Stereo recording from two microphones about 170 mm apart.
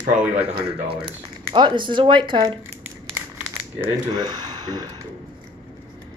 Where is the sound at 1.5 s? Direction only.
30° right (ahead or behind).